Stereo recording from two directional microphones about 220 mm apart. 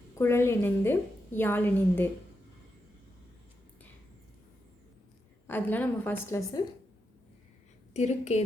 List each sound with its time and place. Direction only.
0.2 s a woman's voice: 10° left (ahead or behind)
5.5 s a woman's voice: 10° left (ahead or behind)
7.9 s a woman's voice: 30° left (ahead or behind)